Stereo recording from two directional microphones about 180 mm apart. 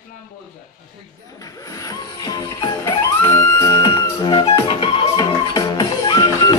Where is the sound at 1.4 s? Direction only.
20° left (ahead or behind).